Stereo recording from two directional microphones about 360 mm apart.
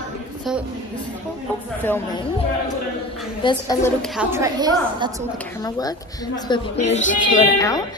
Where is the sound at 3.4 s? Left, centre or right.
Centre.